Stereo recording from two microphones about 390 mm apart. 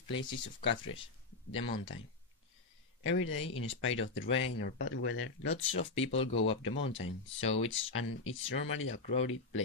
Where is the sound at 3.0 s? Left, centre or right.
Left.